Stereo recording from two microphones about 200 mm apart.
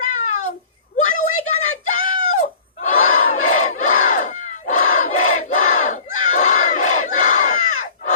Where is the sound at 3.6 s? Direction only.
35° left (ahead or behind).